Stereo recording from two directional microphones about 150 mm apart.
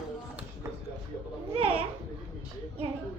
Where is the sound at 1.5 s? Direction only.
40° right (ahead or behind).